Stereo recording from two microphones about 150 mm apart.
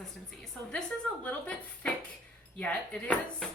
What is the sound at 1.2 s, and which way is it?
A woman's voice, 10° left (ahead or behind).